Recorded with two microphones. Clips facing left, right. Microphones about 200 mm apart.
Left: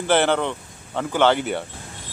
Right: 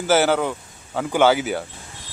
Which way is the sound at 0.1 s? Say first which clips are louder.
Right 1 dB; 5° right (ahead or behind).